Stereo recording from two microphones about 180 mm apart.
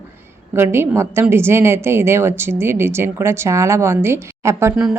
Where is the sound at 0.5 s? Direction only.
15° right (ahead or behind).